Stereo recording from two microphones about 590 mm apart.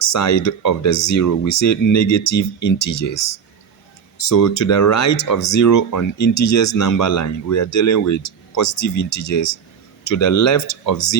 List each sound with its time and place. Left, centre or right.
0.0 s speech: left